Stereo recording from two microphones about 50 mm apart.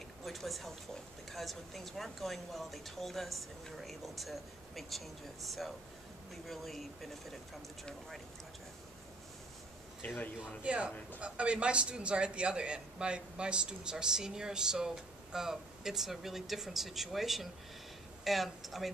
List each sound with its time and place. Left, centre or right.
0.2 s speech: centre
10.0 s a man's voice: left
10.6 s a man's voice: right; by 18.9 s centre